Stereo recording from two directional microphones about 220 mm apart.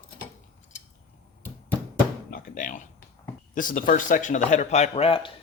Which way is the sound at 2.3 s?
40° left (ahead or behind).